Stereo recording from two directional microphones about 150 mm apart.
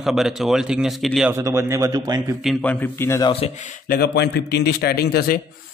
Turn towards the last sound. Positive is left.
turn(degrees=90)